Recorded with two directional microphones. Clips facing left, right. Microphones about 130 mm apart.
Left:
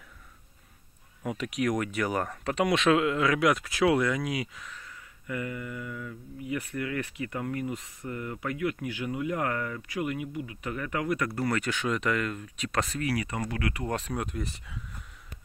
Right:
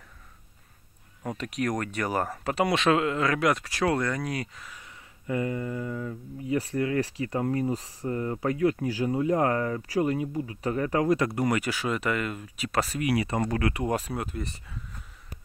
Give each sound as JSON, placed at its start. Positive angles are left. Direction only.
{"t": 1.2, "sound": "speech", "side_deg": 5}
{"t": 5.2, "sound": "speech", "side_deg": -30}
{"t": 11.3, "sound": "speech", "side_deg": -15}
{"t": 13.1, "sound": "speech", "side_deg": -25}
{"t": 13.8, "sound": "speech", "side_deg": -10}